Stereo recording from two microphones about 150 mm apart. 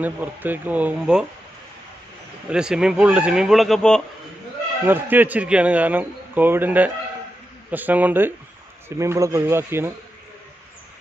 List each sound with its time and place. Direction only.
0.0 s a man's voice: 10° right (ahead or behind)
2.5 s a man's voice: 5° right (ahead or behind)
4.8 s a man's voice: 15° right (ahead or behind)